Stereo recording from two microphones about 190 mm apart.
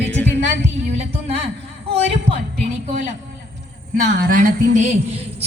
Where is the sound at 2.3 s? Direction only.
35° right (ahead or behind).